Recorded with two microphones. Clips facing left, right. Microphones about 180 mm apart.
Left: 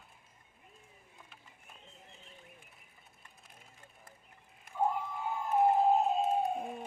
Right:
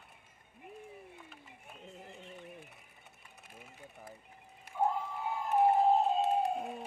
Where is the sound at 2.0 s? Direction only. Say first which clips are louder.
Right 8 dB; 70° right (ahead or behind).